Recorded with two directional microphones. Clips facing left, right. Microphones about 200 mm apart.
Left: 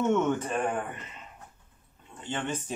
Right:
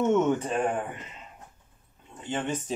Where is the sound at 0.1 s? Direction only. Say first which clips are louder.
Right 2 dB; 15° right (ahead or behind).